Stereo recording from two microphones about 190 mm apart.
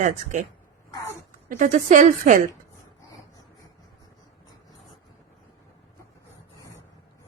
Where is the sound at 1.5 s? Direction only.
45° right (ahead or behind).